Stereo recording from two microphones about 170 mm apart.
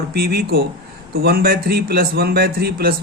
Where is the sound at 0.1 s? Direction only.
65° right (ahead or behind).